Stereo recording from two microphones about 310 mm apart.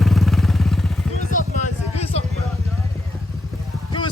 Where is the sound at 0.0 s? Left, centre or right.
Centre.